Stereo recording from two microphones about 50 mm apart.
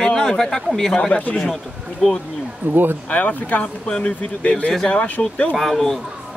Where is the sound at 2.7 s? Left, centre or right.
Right.